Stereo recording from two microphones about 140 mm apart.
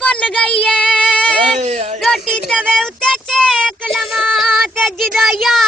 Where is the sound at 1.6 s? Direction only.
55° right (ahead or behind).